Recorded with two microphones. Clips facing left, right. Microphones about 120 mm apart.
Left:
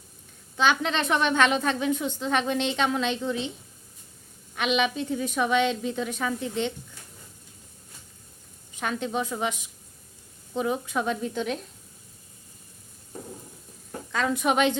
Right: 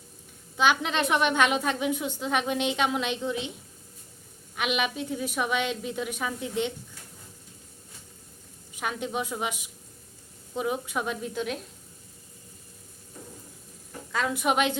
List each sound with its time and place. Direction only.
0.5 s a woman's voice: 10° right (ahead or behind)
4.5 s a woman's voice: 5° right (ahead or behind)
8.7 s a woman's voice: 10° right (ahead or behind)
14.1 s a woman's voice: 5° right (ahead or behind)